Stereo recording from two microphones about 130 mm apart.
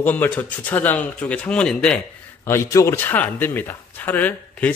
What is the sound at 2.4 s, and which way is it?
Speech, 20° left (ahead or behind).